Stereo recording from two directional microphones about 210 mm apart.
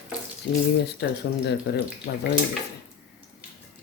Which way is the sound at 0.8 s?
55° left (ahead or behind).